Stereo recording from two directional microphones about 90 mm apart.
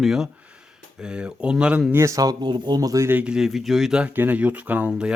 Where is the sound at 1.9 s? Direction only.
35° right (ahead or behind).